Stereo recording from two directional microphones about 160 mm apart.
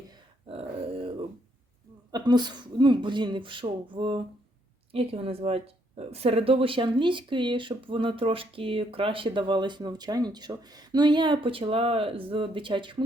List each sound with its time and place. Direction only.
0.4 s dog: 35° right (ahead or behind)
2.1 s speech: 25° right (ahead or behind)